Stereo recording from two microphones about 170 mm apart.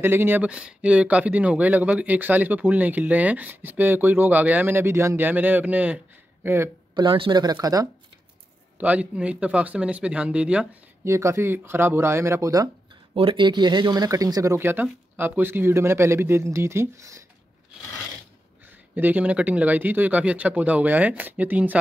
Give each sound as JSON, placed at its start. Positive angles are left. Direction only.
{"t": 0.0, "sound": "speech", "side_deg": -15}
{"t": 7.1, "sound": "speech", "side_deg": -30}
{"t": 8.7, "sound": "speech", "side_deg": -10}
{"t": 13.1, "sound": "speech", "side_deg": -30}
{"t": 18.9, "sound": "speech", "side_deg": -10}